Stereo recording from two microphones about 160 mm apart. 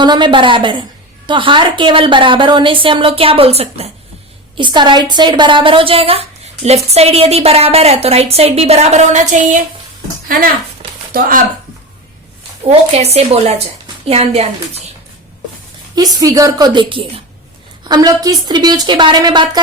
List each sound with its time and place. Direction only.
0.0 s a woman's voice: 30° right (ahead or behind)
4.5 s a woman's voice: 30° right (ahead or behind); by 9.6 s 50° right (ahead or behind)
11.1 s speech: 60° right (ahead or behind)
12.9 s a woman's voice: 40° right (ahead or behind)
16.0 s a woman's voice: 25° right (ahead or behind)